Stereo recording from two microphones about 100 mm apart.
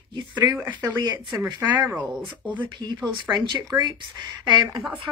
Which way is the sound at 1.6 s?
20° right (ahead or behind).